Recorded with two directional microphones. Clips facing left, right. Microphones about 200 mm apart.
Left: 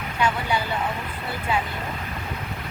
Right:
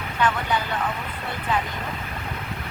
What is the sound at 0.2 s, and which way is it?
Speech, 10° left (ahead or behind).